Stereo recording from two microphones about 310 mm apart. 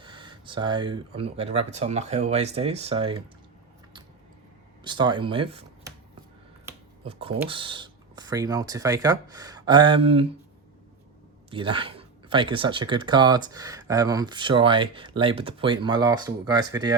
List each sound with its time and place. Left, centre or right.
0.0 s speech: centre
4.8 s speech: centre
6.7 s finger snapping: centre
7.4 s speech: centre
11.5 s speech: centre